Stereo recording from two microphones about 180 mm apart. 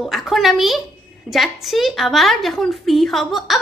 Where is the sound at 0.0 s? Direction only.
Centre (ahead or behind).